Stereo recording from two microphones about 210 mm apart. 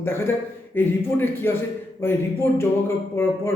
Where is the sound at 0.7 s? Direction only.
10° left (ahead or behind).